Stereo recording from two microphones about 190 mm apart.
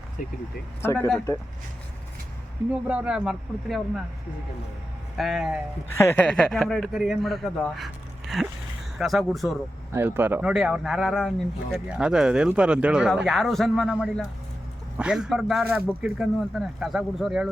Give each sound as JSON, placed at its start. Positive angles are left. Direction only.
{"t": 0.2, "sound": "speech", "side_deg": 45}
{"t": 0.8, "sound": "speech", "side_deg": 10}
{"t": 2.8, "sound": "speech", "side_deg": -5}
{"t": 5.1, "sound": "speech", "side_deg": 0}
{"t": 5.9, "sound": "speech", "side_deg": 15}
{"t": 9.9, "sound": "speech", "side_deg": -10}